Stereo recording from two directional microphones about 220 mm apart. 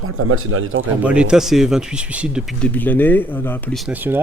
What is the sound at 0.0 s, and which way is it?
Speech, 70° right (ahead or behind).